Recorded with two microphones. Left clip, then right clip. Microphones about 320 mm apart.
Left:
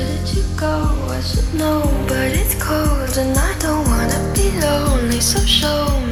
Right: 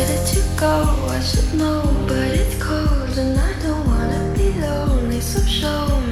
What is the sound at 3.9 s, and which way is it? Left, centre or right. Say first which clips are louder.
Music: left 3 dB; left.